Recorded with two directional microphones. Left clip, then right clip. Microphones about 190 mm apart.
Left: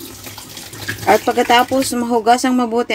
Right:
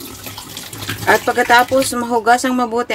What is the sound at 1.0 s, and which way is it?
Speech, 15° left (ahead or behind).